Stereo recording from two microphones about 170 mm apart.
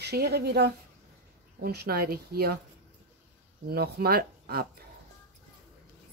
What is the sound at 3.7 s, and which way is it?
Speech, 65° right (ahead or behind).